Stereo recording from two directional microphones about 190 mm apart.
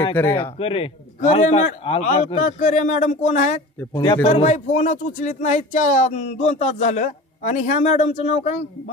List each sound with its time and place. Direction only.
0.3 s speech: 30° left (ahead or behind)
1.2 s speech: 40° left (ahead or behind)
3.9 s speech: 25° left (ahead or behind)
4.3 s speech: 40° left (ahead or behind)